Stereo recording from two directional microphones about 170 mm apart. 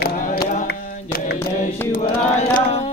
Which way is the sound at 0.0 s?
65° left (ahead or behind).